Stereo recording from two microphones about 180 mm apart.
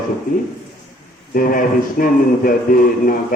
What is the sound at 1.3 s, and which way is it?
A man's voice, 50° left (ahead or behind).